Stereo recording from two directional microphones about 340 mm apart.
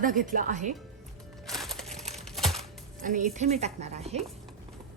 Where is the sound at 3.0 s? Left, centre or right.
Right.